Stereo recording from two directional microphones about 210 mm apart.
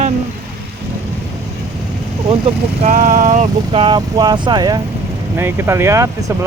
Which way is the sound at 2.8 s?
40° right (ahead or behind).